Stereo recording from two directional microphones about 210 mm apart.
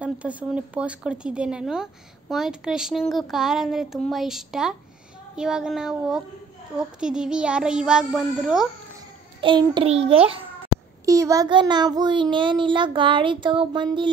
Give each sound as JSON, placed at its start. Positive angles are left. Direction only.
{"t": 0.0, "sound": "speech", "side_deg": -5}
{"t": 9.4, "sound": "child singing", "side_deg": -20}
{"t": 11.1, "sound": "child singing", "side_deg": -15}